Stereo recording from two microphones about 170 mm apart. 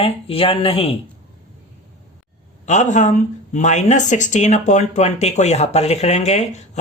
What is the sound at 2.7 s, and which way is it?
Speech, 45° left (ahead or behind).